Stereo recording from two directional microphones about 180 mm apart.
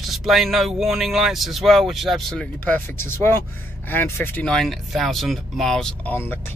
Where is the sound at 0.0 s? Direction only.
Centre (ahead or behind).